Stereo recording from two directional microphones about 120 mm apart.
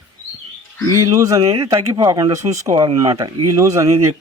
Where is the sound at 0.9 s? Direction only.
30° right (ahead or behind).